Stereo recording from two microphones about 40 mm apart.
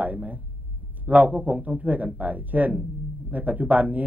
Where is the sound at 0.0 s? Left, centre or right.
Right.